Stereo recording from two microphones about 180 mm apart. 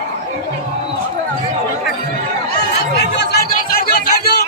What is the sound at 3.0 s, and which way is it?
Chatter, 70° left (ahead or behind).